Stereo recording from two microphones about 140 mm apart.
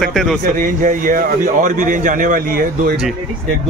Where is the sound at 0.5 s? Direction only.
70° right (ahead or behind); by 3.0 s 85° right.